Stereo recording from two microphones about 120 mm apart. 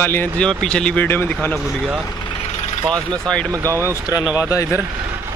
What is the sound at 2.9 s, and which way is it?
Speech, 10° left (ahead or behind).